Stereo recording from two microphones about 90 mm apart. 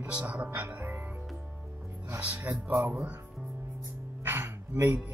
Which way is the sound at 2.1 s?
20° right (ahead or behind).